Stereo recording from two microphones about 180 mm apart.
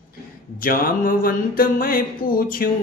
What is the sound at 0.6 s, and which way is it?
Music, 50° left (ahead or behind).